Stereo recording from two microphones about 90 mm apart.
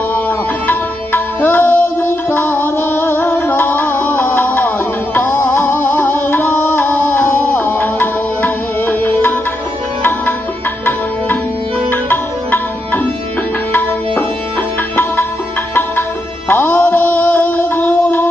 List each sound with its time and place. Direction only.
0.1 s music: 20° left (ahead or behind)
11.9 s music: 20° left (ahead or behind)
14.9 s music: 20° left (ahead or behind)
16.5 s music: 20° left (ahead or behind)